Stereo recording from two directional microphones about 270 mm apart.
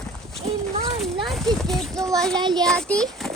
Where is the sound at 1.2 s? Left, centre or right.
Centre.